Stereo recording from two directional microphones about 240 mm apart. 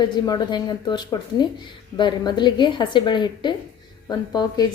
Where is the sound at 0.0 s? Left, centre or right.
Centre.